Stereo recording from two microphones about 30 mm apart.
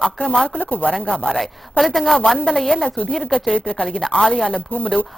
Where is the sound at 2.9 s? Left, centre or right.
Left.